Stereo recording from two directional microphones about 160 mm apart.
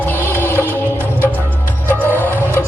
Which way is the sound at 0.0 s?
10° left (ahead or behind).